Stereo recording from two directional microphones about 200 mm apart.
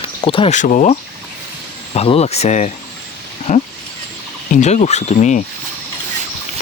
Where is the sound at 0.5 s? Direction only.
40° left (ahead or behind).